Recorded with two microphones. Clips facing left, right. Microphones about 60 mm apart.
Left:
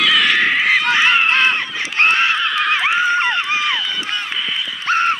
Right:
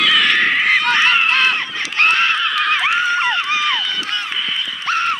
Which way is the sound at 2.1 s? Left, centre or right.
Centre.